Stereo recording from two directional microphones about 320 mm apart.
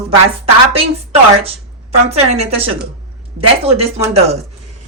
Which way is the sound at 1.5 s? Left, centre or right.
Centre.